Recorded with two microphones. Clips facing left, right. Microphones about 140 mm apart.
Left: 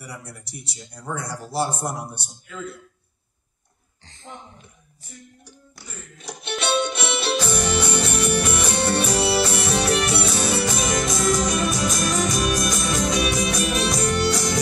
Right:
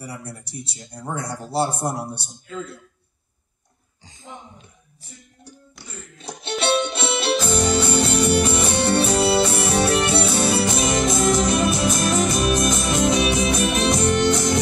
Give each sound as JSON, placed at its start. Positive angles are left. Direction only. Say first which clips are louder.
{"t": 0.0, "sound": "music", "louder": "right 4 dB", "side_deg": -30}
{"t": 1.5, "sound": "a man's voice", "louder": "right 3 dB", "side_deg": -30}
{"t": 4.0, "sound": "a sound", "louder": "right 1 dB", "side_deg": -10}
{"t": 6.1, "sound": "music", "louder": "right 2 dB", "side_deg": -30}